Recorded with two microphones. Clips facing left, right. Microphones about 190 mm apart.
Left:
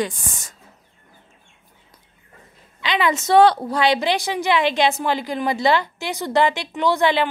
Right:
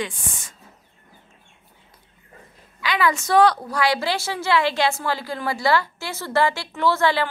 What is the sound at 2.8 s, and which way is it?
A woman's voice, 20° left (ahead or behind).